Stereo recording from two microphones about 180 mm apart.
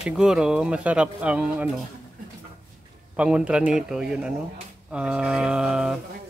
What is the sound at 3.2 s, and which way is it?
Speech, 5° right (ahead or behind).